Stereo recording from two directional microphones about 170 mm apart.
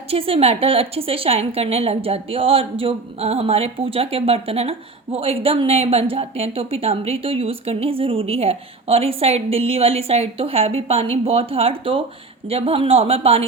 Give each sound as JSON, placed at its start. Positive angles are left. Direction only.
{"t": 0.1, "sound": "speech", "side_deg": -35}